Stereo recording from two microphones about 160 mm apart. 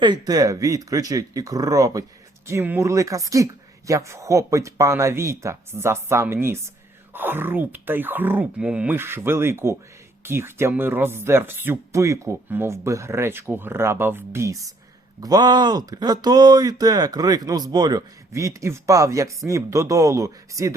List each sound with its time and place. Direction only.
0.0 s speech: 25° right (ahead or behind)